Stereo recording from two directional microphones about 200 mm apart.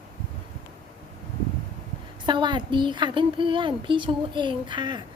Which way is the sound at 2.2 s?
25° right (ahead or behind).